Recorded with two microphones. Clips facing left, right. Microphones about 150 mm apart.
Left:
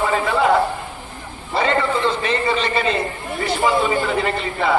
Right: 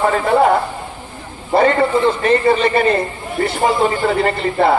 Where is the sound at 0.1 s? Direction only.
50° right (ahead or behind).